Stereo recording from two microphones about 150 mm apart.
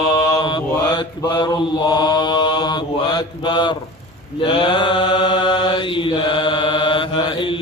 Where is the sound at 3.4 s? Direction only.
30° left (ahead or behind).